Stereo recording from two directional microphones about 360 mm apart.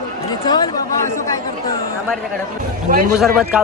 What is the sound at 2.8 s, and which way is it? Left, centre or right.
Speech, right.